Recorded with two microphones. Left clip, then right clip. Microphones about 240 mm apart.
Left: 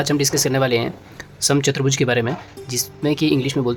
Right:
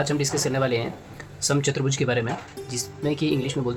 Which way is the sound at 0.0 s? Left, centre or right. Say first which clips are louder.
Left 5 dB; left.